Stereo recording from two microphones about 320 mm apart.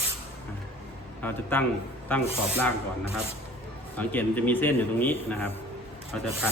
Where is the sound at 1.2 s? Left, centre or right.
Centre.